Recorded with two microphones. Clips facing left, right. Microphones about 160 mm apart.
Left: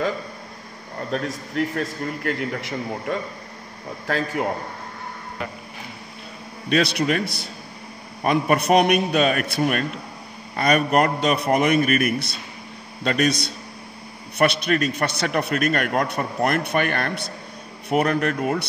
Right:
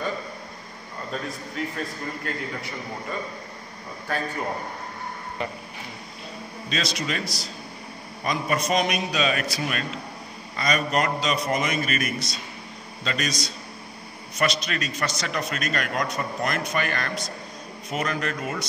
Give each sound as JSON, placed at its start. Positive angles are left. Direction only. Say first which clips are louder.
{"t": 1.1, "sound": "a man's voice", "louder": "left 7 dB", "side_deg": 70}
{"t": 6.7, "sound": "a man's voice", "louder": "left 9 dB", "side_deg": 60}